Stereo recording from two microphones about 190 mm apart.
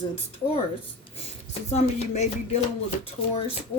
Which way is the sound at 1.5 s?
35° left (ahead or behind).